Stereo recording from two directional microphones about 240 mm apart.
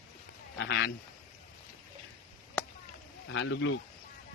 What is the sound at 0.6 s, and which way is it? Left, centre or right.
Speech, left.